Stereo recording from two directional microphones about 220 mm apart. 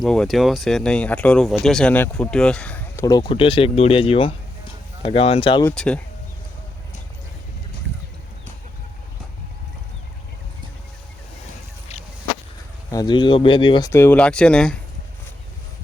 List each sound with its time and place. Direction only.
0.0 s speech: centre (ahead or behind); by 5.6 s 25° left (ahead or behind)
5.6 s speech: 5° left (ahead or behind)
12.9 s speech: 20° left (ahead or behind)